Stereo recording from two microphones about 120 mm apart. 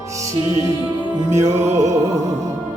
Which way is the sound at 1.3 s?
25° right (ahead or behind).